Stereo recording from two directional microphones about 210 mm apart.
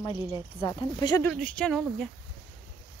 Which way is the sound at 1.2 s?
5° left (ahead or behind).